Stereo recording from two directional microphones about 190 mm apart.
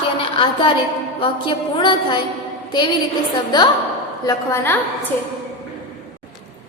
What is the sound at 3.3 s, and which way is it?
A woman's voice, 20° left (ahead or behind).